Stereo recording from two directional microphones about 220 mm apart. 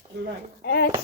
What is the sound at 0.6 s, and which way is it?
Speech, 45° left (ahead or behind).